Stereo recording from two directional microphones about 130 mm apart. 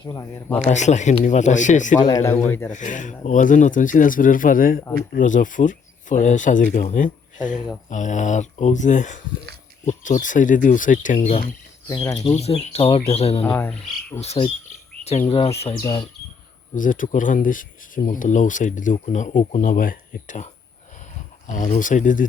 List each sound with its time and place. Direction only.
0.0 s speech: 25° left (ahead or behind)
0.7 s speech: 65° left (ahead or behind)
2.0 s speech: 25° left (ahead or behind)
2.5 s cricket: 15° left (ahead or behind)
2.7 s speech: 70° left (ahead or behind)
7.9 s speech: 70° left (ahead or behind); by 11.2 s 85° left
11.2 s speech: 65° left (ahead or behind)
11.9 s speech: 30° left (ahead or behind)
12.4 s speech: 50° left (ahead or behind)
13.4 s cricket: 10° left (ahead or behind)
14.2 s speech: 55° left (ahead or behind)
15.7 s speech: 30° left (ahead or behind)
16.7 s speech: 90° left